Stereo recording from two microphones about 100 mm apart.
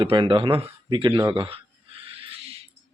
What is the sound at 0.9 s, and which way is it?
Speech, 50° right (ahead or behind).